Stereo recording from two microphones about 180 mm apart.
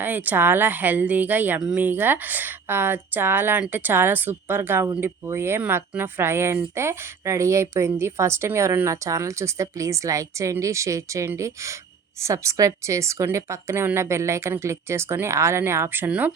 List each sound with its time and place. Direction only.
0.0 s a woman's voice: 10° right (ahead or behind)